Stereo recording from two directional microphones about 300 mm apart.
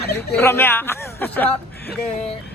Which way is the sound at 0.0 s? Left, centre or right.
Left.